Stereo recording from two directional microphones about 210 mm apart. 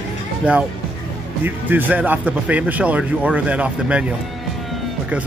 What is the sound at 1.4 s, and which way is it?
A man's voice, 10° right (ahead or behind).